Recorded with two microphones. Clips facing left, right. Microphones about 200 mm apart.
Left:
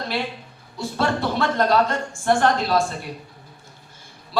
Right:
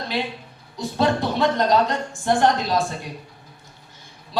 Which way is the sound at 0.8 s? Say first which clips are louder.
Right 2 dB; 20° right (ahead or behind).